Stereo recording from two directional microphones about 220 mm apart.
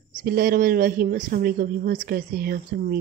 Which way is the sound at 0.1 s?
40° right (ahead or behind).